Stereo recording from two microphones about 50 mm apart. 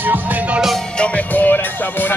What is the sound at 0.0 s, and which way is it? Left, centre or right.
Music, right.